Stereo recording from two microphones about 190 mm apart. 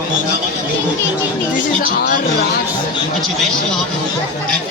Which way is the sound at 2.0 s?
50° left (ahead or behind).